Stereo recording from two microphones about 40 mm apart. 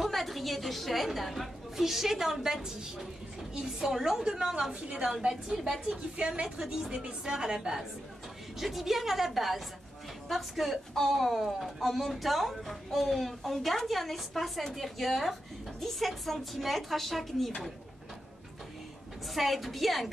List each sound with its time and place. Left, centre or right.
0.0 s a woman's voice: centre; by 5.1 s right
6.1 s a woman's voice: right; by 17.5 s centre
19.3 s a woman's voice: centre